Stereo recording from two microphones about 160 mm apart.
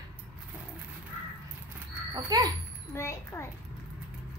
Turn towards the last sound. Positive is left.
turn(degrees=15)  # may be behind; listen again after turning